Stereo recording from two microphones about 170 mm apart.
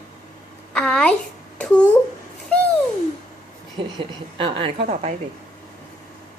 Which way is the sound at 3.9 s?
30° right (ahead or behind).